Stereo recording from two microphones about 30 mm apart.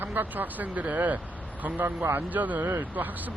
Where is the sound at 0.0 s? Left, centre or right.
Right.